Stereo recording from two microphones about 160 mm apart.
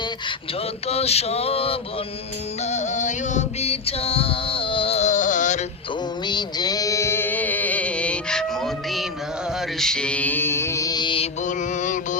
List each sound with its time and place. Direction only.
0.9 s male singing: 40° left (ahead or behind)
2.6 s female singing: 45° left (ahead or behind)
6.2 s music: 25° left (ahead or behind)
11.4 s music: 50° left (ahead or behind)